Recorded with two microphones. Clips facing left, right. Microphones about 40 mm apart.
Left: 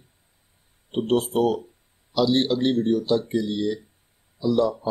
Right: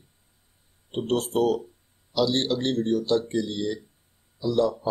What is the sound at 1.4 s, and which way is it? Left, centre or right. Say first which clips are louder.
Speech: left 1 dB; centre.